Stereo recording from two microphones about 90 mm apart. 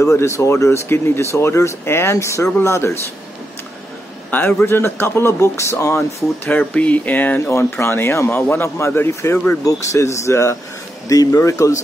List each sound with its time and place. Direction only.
0.0 s speech: 30° left (ahead or behind)
4.3 s a man's voice: 20° left (ahead or behind)
6.5 s speech: 15° left (ahead or behind); by 11.8 s 35° left (ahead or behind)